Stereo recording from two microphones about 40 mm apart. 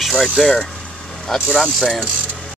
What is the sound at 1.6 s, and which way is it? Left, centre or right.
Speech, centre.